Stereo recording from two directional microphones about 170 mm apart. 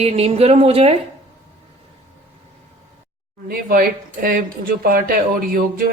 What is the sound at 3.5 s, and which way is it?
Speech, 60° right (ahead or behind).